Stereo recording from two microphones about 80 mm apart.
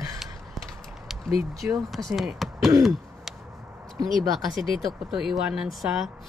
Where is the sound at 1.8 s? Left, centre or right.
Centre.